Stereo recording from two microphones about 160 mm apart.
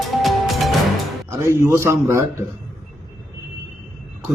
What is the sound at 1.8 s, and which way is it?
Speech, 15° right (ahead or behind).